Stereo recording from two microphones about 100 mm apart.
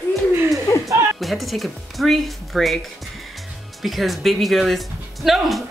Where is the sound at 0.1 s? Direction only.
25° right (ahead or behind).